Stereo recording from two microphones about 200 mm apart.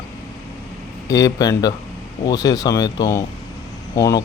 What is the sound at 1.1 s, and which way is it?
Speech, 15° left (ahead or behind).